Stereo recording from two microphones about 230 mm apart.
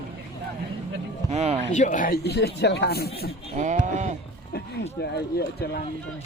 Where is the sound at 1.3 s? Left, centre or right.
Right.